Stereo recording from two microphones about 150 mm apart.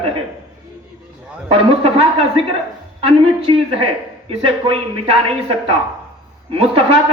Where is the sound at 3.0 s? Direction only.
35° right (ahead or behind).